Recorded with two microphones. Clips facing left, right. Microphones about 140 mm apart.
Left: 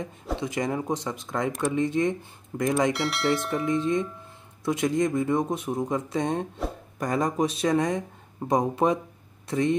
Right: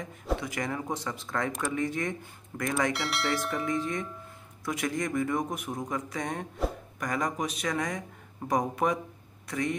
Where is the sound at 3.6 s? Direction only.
20° left (ahead or behind).